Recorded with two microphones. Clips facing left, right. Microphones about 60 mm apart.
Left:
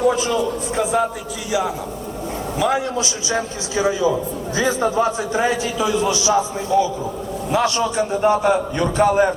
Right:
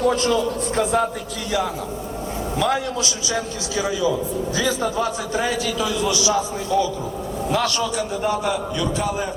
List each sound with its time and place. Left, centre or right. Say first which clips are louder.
0.0 s a man's voice: left 1 dB; centre
2.9 s a man's voice: left 2 dB; left